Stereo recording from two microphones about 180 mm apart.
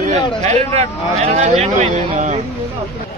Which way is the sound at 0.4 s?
35° right (ahead or behind).